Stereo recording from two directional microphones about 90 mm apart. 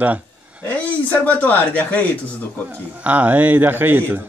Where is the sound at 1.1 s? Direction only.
20° left (ahead or behind).